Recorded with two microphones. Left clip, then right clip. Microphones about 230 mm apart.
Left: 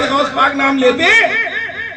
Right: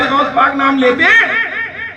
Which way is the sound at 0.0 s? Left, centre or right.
Centre.